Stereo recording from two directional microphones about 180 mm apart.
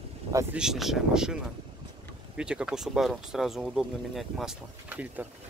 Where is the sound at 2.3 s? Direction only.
5° right (ahead or behind).